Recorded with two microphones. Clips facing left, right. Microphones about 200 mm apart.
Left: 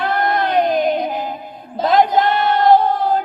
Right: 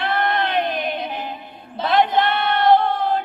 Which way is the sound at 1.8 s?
40° left (ahead or behind).